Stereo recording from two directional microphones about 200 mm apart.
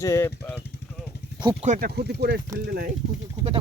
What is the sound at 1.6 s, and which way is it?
Speech, 40° right (ahead or behind).